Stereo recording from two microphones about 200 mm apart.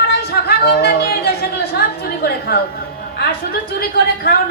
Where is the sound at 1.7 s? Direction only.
50° left (ahead or behind).